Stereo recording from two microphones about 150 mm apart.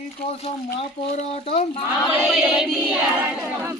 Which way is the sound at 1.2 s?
45° left (ahead or behind).